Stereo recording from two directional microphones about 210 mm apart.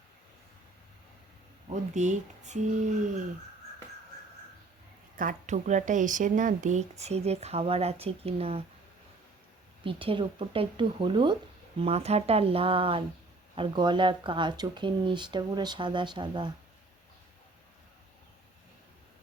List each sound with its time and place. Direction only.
1.7 s speech: 35° right (ahead or behind)
5.1 s speech: 40° right (ahead or behind)
9.8 s speech: 25° right (ahead or behind)